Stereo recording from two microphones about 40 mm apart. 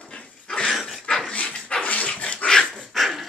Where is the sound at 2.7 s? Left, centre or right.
Centre.